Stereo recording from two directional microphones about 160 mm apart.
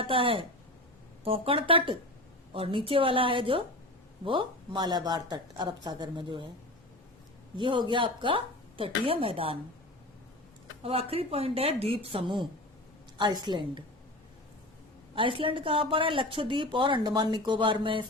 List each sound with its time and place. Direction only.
0.0 s a woman's voice: 35° right (ahead or behind)
7.5 s a woman's voice: 30° right (ahead or behind)
11.1 s a woman's voice: 40° right (ahead or behind)
15.1 s a woman's voice: 35° right (ahead or behind)